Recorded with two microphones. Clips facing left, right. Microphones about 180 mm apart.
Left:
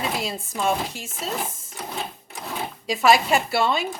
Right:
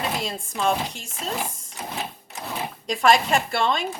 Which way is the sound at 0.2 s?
5° left (ahead or behind).